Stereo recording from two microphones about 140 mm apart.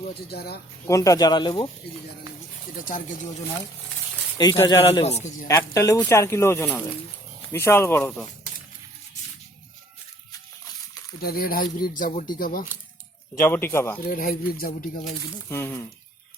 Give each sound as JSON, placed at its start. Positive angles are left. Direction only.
{"t": 0.9, "sound": "speech", "side_deg": 25}
{"t": 2.7, "sound": "speech", "side_deg": 70}
{"t": 4.4, "sound": "speech", "side_deg": 25}
{"t": 5.0, "sound": "a man's voice", "side_deg": 55}
{"t": 5.5, "sound": "a man's voice", "side_deg": 20}
{"t": 11.2, "sound": "speech", "side_deg": 90}
{"t": 12.4, "sound": "speech", "side_deg": 90}
{"t": 13.3, "sound": "a man's voice", "side_deg": 15}
{"t": 14.1, "sound": "speech", "side_deg": 80}
{"t": 15.4, "sound": "a man's voice", "side_deg": 15}